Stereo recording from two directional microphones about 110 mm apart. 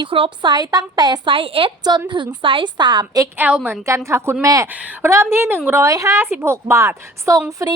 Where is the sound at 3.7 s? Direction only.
25° right (ahead or behind).